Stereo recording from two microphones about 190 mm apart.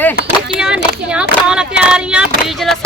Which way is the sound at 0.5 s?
5° right (ahead or behind).